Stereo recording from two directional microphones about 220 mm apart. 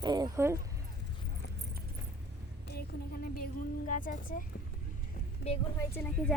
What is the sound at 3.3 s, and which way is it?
Music, 40° left (ahead or behind).